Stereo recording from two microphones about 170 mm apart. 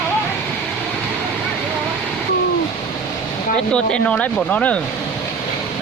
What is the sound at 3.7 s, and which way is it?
Speech, 5° left (ahead or behind).